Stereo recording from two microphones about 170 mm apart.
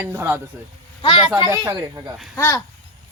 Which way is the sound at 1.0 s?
30° left (ahead or behind).